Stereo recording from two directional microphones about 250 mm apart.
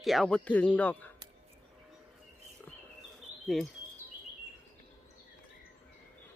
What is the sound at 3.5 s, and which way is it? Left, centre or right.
Speech, centre.